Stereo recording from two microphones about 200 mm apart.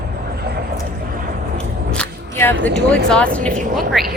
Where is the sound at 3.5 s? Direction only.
40° right (ahead or behind).